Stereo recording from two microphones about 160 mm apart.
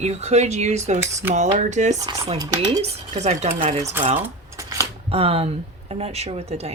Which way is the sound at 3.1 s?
45° right (ahead or behind).